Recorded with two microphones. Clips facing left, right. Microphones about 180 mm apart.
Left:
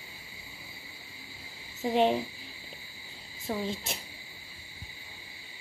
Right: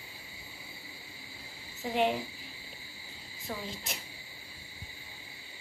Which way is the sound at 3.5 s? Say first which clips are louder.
Left 6 dB; 30° left (ahead or behind).